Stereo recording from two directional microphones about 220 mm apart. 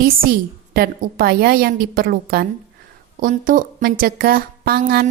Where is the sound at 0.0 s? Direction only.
40° right (ahead or behind).